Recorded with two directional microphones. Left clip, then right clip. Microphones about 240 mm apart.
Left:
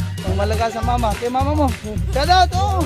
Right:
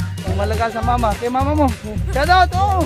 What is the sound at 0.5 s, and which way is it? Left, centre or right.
Speech, centre.